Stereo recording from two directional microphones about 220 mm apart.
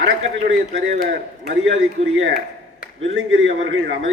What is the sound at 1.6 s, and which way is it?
A man's voice, 60° right (ahead or behind).